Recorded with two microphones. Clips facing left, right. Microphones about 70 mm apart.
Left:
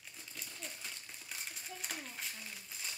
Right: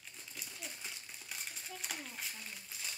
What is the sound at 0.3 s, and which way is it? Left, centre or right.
Crumpling, centre.